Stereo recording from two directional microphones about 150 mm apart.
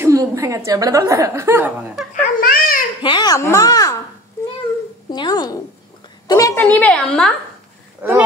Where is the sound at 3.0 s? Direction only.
30° left (ahead or behind).